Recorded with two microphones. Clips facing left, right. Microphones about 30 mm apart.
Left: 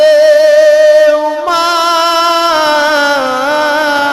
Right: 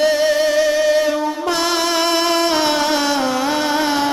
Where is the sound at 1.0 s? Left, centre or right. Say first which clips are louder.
Left 10 dB; left.